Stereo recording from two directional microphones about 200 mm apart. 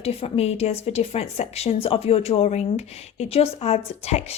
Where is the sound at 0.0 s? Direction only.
30° left (ahead or behind).